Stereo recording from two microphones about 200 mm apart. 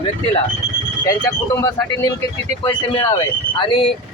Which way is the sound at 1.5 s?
15° left (ahead or behind).